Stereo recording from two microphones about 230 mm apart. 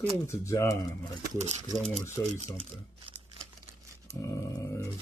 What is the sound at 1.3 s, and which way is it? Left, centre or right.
Speech, right.